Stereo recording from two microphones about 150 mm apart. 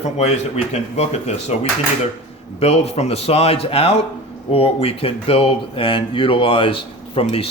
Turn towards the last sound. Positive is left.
turn(degrees=40)  # may be behind; listen again after turning